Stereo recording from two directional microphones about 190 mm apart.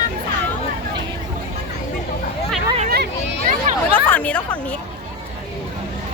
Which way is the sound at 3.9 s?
10° left (ahead or behind).